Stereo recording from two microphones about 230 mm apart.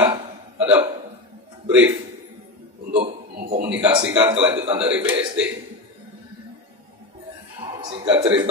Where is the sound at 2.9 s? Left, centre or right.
Right.